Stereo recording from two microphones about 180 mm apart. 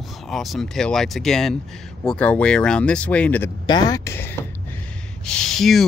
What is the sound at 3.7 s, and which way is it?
Speech, 20° left (ahead or behind).